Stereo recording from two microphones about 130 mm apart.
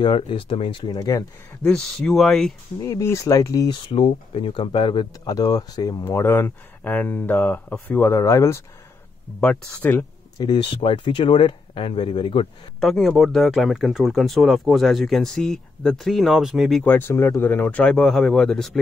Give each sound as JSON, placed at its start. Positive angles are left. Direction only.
{"t": 0.0, "sound": "speech", "side_deg": 40}
{"t": 0.9, "sound": "speech", "side_deg": 30}
{"t": 1.6, "sound": "speech", "side_deg": 5}
{"t": 2.8, "sound": "speech", "side_deg": 25}
{"t": 3.7, "sound": "speech", "side_deg": 45}
{"t": 9.4, "sound": "speech", "side_deg": 10}
{"t": 10.3, "sound": "speech", "side_deg": 35}
{"t": 12.8, "sound": "speech", "side_deg": 0}
{"t": 16.8, "sound": "speech", "side_deg": 15}